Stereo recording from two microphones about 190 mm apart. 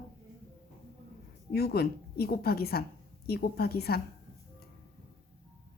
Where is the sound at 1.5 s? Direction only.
55° left (ahead or behind).